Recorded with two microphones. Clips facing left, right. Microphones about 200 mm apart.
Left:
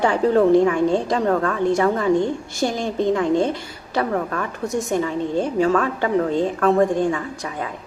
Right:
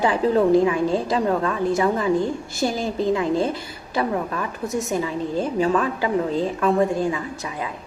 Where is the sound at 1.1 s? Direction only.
15° right (ahead or behind).